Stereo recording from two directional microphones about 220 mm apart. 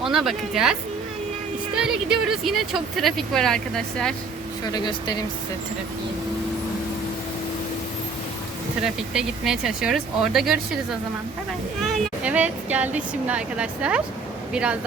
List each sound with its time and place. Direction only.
0.0 s speech: centre (ahead or behind)
4.7 s speech: 20° left (ahead or behind)
8.8 s speech: 5° right (ahead or behind)
11.8 s speech: 5° right (ahead or behind)